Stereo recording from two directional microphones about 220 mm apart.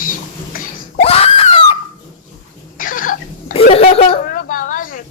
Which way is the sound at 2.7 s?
40° left (ahead or behind).